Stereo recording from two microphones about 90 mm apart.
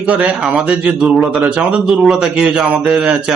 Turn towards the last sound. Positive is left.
turn(degrees=-15)  # may be behind; listen again after turning